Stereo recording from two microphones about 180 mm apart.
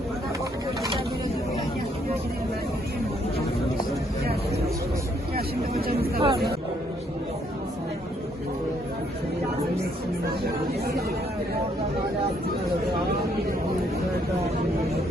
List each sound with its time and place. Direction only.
6.1 s chatter: 30° right (ahead or behind)